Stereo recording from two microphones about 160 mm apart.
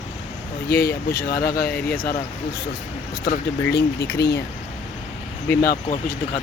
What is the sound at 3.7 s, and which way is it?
Speech, 90° left.